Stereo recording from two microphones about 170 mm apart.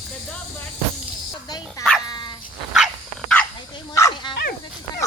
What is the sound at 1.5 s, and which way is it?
Dog, 25° left (ahead or behind).